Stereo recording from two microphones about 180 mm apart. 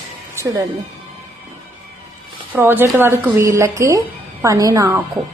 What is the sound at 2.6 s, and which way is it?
A woman's voice, 15° right (ahead or behind).